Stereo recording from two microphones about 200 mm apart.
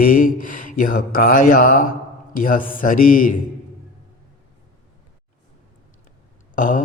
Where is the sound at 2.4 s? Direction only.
40° left (ahead or behind).